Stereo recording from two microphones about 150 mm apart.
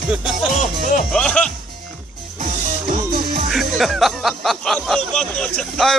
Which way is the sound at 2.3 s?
60° right (ahead or behind).